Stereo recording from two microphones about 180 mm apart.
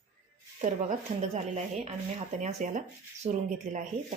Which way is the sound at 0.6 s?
40° right (ahead or behind).